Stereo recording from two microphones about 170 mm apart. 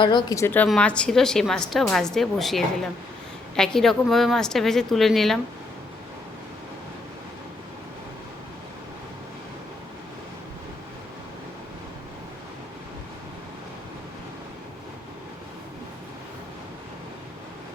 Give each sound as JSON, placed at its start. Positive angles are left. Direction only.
{"t": 0.0, "sound": "a woman's voice", "side_deg": 30}